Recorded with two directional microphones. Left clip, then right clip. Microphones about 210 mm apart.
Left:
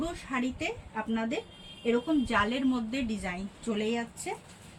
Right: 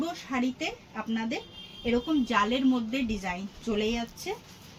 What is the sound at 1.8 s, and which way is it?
Speech, 10° left (ahead or behind).